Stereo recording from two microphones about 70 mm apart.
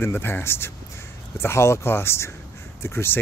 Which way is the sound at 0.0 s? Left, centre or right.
Left.